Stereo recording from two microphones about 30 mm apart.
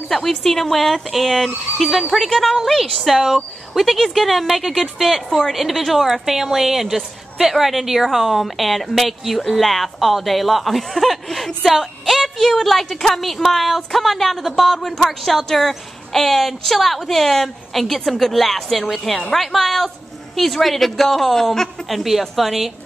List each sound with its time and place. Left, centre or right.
0.3 s a woman's voice: centre